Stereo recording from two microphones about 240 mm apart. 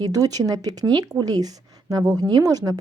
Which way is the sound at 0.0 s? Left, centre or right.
Centre.